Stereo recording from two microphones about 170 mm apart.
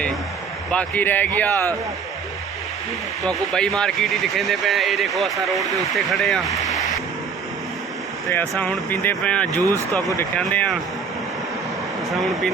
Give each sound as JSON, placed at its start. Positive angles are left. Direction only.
{"t": 0.7, "sound": "speech", "side_deg": 10}
{"t": 3.2, "sound": "speech", "side_deg": 5}
{"t": 8.3, "sound": "speech", "side_deg": 10}
{"t": 9.5, "sound": "speech", "side_deg": -20}
{"t": 10.2, "sound": "speech", "side_deg": 10}
{"t": 12.1, "sound": "speech", "side_deg": 0}